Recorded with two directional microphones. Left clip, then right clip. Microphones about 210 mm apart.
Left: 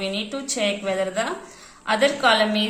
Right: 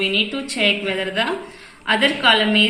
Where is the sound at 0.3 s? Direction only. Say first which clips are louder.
Right 5 dB; 60° left (ahead or behind).